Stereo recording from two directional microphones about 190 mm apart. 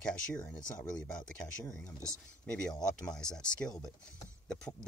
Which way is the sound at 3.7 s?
20° left (ahead or behind).